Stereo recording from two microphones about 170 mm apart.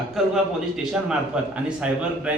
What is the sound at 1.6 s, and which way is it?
Speech, 5° right (ahead or behind).